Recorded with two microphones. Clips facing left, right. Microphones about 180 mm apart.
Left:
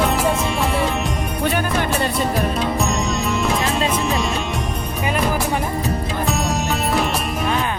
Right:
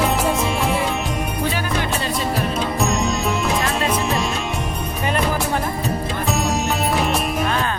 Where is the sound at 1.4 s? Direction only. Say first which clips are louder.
Left 5 dB; 55° left (ahead or behind).